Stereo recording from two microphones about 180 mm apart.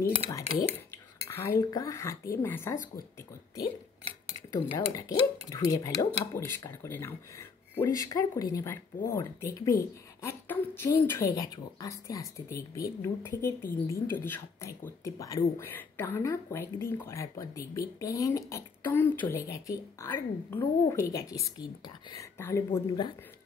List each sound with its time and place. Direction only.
1.2 s speech: 15° left (ahead or behind)
4.3 s speech: 15° left (ahead or behind)